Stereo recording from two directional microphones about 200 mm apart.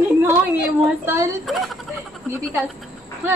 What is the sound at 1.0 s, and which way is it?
Speech, 15° right (ahead or behind).